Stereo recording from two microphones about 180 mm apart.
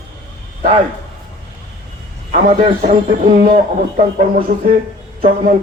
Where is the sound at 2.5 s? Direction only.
45° right (ahead or behind).